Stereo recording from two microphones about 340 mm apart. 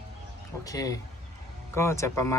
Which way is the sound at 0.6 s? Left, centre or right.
Centre.